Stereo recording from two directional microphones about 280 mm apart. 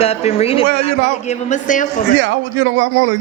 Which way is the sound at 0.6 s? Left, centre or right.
Right.